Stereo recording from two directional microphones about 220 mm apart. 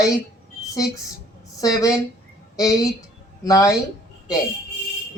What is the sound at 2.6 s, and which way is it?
Speech, 15° left (ahead or behind).